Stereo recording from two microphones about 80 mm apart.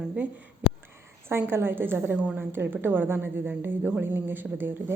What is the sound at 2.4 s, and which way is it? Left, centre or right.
A woman's voice, right.